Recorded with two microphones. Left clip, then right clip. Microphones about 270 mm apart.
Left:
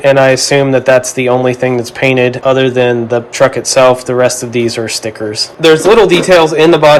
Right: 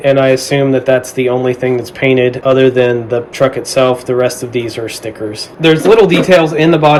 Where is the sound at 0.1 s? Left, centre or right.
Centre.